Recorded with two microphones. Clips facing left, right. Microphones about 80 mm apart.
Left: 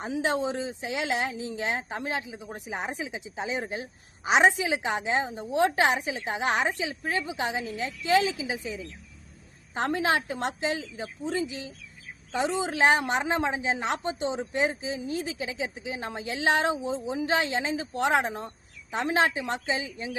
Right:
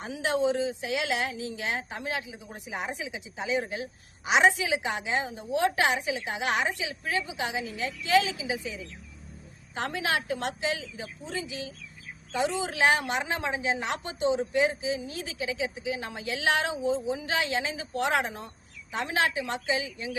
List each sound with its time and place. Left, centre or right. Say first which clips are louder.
0.0 s a woman's voice: even; left